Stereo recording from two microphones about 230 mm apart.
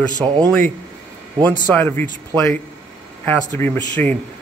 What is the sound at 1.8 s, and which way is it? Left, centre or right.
A man's voice, centre.